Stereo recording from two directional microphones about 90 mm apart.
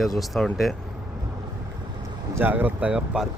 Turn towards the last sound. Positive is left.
turn(degrees=-10)  # may be behind; listen again after turning